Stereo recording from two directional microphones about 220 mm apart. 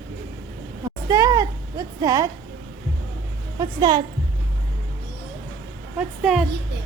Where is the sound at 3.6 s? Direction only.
15° right (ahead or behind).